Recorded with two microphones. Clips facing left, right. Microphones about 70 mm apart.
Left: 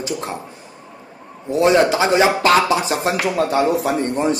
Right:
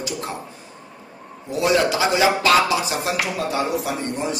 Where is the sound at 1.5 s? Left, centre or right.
Left.